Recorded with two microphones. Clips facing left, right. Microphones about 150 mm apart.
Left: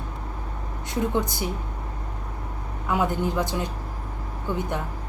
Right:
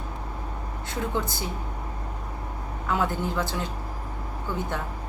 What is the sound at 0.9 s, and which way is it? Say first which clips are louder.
Speech: left 4 dB; 15° left (ahead or behind).